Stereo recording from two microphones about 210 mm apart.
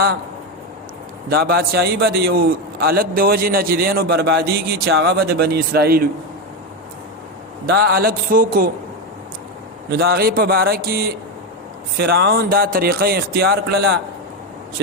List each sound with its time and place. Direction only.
1.3 s a man's voice: 50° right (ahead or behind)
7.7 s a man's voice: 45° right (ahead or behind)
9.9 s a man's voice: 45° right (ahead or behind)